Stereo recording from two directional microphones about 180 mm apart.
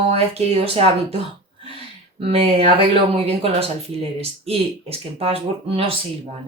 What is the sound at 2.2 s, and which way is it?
Speech, 35° right (ahead or behind).